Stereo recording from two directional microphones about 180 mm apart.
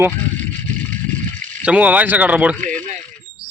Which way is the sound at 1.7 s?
10° right (ahead or behind).